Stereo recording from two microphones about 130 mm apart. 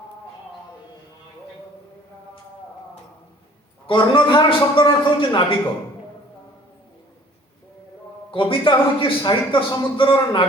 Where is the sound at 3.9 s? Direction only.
40° left (ahead or behind).